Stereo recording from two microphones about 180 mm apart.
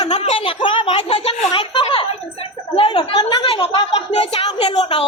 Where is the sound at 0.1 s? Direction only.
35° left (ahead or behind).